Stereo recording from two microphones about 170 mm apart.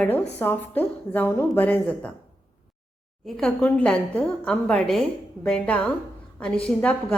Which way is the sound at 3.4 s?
5° left (ahead or behind).